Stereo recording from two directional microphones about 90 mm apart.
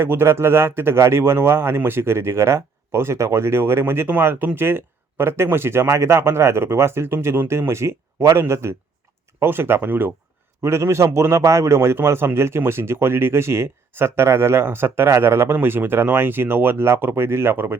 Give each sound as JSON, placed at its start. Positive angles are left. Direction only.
{"t": 0.0, "sound": "speech", "side_deg": -25}